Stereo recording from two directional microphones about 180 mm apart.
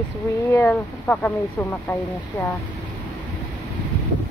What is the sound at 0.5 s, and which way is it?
Speech, 10° left (ahead or behind).